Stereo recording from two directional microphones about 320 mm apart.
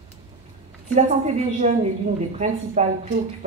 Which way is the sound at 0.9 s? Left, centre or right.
Right.